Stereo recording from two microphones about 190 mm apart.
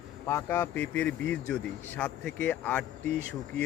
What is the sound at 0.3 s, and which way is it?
Speech, 15° left (ahead or behind).